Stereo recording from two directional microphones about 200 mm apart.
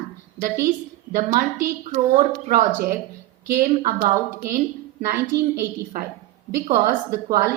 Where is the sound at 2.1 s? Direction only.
45° right (ahead or behind).